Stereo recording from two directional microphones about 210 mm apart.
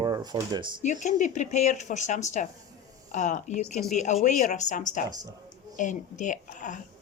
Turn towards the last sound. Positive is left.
turn(degrees=35)  # may be behind; listen again after turning